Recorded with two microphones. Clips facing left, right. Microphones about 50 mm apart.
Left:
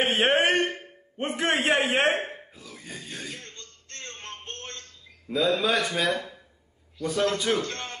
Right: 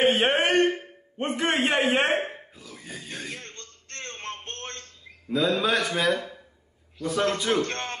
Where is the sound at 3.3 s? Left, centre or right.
Right.